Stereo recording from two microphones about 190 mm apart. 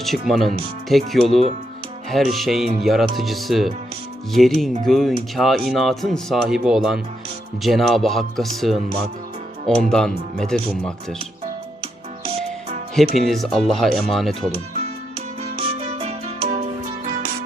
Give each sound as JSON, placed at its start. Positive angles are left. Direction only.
{"t": 0.0, "sound": "speech", "side_deg": 0}
{"t": 9.9, "sound": "speech", "side_deg": 5}
{"t": 13.0, "sound": "speech", "side_deg": 0}
{"t": 16.0, "sound": "music", "side_deg": -35}